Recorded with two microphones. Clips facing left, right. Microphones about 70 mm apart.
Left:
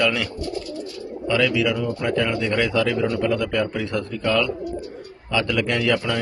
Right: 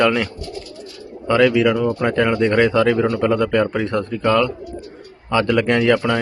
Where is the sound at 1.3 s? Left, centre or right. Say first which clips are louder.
Right 6 dB; right.